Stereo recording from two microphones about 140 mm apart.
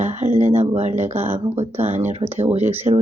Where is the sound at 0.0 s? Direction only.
55° right (ahead or behind).